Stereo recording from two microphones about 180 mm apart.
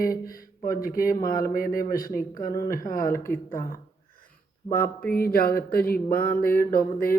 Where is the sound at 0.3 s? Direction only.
55° left (ahead or behind).